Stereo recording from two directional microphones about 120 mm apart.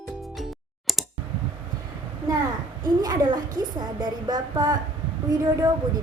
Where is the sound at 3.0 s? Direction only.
35° right (ahead or behind).